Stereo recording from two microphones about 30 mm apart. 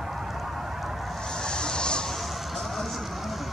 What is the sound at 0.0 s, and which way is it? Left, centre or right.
Fowl, centre.